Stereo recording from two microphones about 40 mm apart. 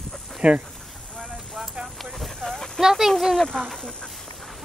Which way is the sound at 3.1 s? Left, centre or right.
Centre.